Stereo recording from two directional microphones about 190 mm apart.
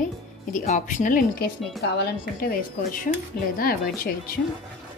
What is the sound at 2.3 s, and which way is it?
Speech, 50° left (ahead or behind).